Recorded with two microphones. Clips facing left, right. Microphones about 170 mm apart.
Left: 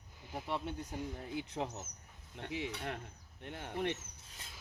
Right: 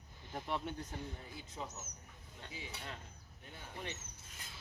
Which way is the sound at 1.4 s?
65° left (ahead or behind).